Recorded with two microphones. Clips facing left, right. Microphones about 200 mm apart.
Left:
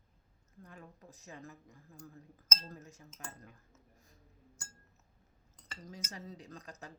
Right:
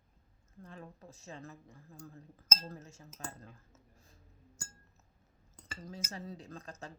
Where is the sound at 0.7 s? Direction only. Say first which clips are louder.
Right 4 dB; 30° right (ahead or behind).